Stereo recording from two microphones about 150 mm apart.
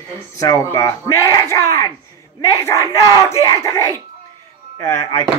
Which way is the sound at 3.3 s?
20° left (ahead or behind).